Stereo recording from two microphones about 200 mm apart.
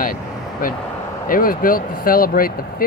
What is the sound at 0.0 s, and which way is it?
Vehicle, 45° left (ahead or behind).